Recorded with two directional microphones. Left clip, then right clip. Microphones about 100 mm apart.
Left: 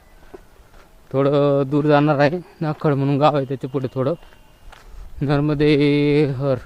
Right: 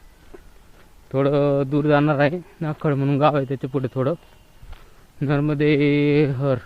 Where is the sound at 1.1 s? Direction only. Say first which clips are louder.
Left 2 dB; 30° left (ahead or behind).